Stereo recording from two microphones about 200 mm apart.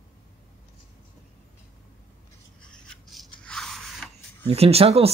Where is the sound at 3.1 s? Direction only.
5° left (ahead or behind).